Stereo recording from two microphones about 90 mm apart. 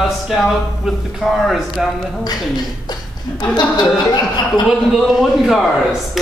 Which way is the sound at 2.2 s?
50° left (ahead or behind).